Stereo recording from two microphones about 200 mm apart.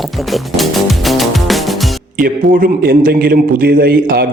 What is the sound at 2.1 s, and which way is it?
A man's voice, 45° right (ahead or behind).